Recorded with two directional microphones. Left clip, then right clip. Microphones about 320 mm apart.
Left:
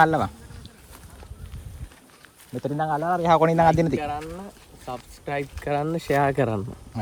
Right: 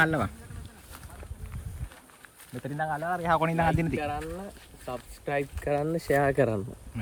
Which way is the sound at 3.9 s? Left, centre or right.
Centre.